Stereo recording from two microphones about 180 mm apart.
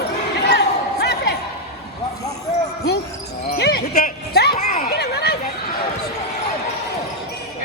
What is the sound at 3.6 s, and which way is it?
Basketball bounce, 65° left (ahead or behind).